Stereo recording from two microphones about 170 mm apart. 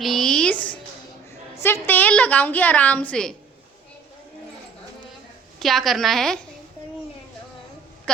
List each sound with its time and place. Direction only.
0.0 s a sound: centre (ahead or behind)
1.6 s a woman's voice: 10° left (ahead or behind)
5.5 s a woman's voice: centre (ahead or behind)